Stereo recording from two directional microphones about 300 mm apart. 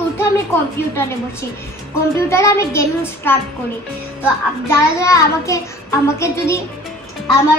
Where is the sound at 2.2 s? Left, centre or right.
Centre.